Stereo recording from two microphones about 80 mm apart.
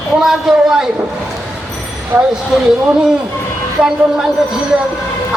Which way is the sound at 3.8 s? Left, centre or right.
Centre.